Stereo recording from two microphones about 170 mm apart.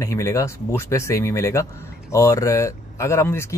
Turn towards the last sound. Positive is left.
turn(degrees=15)  # may be behind; listen again after turning